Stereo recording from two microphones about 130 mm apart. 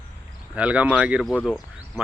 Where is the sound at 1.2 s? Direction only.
5° left (ahead or behind).